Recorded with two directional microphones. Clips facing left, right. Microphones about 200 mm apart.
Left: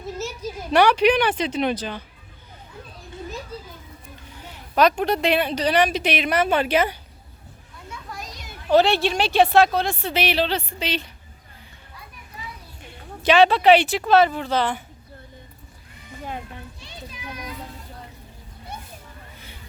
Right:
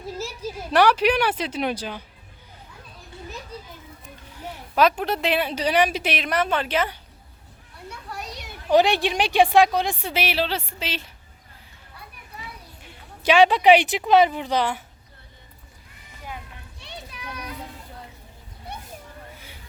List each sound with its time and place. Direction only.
0.7 s a woman's voice: 5° right (ahead or behind)
4.7 s a woman's voice: 5° right (ahead or behind)
8.1 s children playing: 65° right (ahead or behind)
8.7 s a woman's voice: 15° right (ahead or behind)
12.8 s speech: 10° right (ahead or behind)
16.8 s children playing: 65° right (ahead or behind)
18.7 s a sound: 65° right (ahead or behind)